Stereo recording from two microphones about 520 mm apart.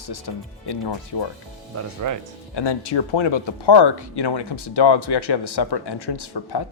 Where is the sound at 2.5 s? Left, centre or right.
Left.